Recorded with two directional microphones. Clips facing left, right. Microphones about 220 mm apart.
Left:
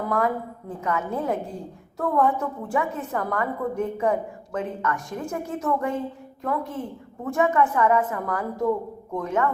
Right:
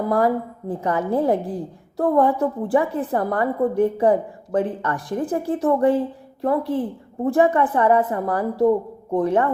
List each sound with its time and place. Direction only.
0.7 s a woman's voice: 35° right (ahead or behind)